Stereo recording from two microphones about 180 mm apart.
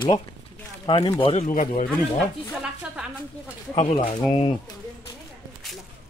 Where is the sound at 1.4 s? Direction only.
45° left (ahead or behind).